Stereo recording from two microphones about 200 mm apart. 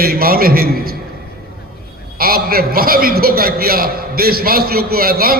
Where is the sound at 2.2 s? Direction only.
50° right (ahead or behind).